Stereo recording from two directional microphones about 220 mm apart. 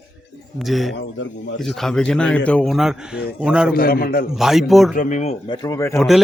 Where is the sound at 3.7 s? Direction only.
40° left (ahead or behind).